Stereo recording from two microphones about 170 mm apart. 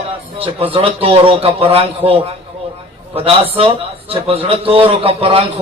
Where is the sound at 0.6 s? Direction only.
35° right (ahead or behind).